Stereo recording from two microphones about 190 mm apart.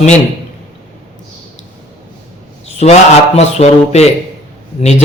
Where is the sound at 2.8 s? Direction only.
35° left (ahead or behind).